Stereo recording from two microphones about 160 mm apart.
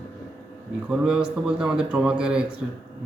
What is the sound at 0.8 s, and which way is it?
Speech, 5° right (ahead or behind).